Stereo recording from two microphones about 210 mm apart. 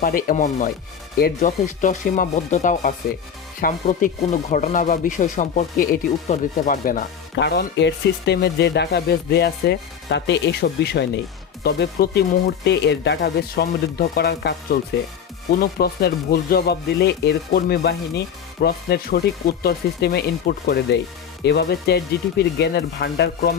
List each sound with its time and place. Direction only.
0.0 s speech: 45° left (ahead or behind)